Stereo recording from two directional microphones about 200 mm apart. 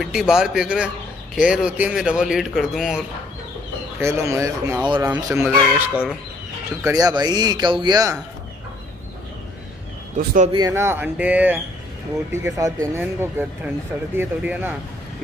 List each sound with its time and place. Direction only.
0.0 s speech: centre (ahead or behind)
4.0 s speech: 15° right (ahead or behind)
5.1 s speech: 5° right (ahead or behind)
6.8 s speech: 15° right (ahead or behind)
10.1 s speech: 40° right (ahead or behind)
10.5 s speech: 15° right (ahead or behind)